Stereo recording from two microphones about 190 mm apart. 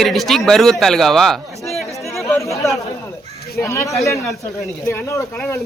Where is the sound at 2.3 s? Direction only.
15° left (ahead or behind).